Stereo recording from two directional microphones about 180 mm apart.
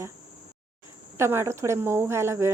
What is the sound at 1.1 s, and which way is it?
Speech, 15° right (ahead or behind).